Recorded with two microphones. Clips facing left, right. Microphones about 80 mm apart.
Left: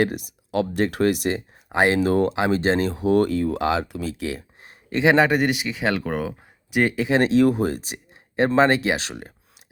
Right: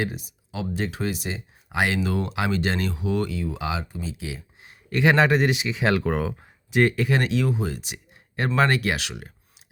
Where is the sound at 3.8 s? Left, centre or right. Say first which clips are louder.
Left 6 dB; left.